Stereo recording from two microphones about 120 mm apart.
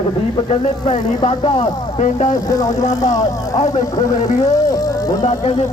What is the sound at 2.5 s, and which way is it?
Speech, 30° left (ahead or behind).